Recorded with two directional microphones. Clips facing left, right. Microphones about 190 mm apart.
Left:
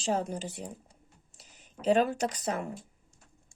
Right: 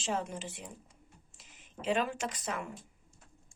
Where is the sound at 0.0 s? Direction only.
40° left (ahead or behind).